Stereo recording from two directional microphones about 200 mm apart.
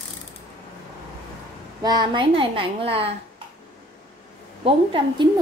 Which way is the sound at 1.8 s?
20° right (ahead or behind).